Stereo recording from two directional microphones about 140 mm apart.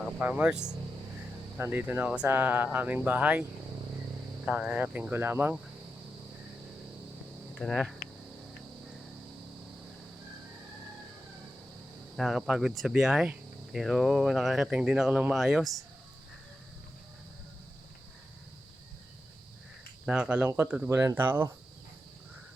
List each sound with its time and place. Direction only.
0.2 s speech: 10° right (ahead or behind)
4.4 s speech: 10° right (ahead or behind)
7.6 s speech: centre (ahead or behind)
12.1 s speech: centre (ahead or behind)
20.1 s speech: 10° right (ahead or behind)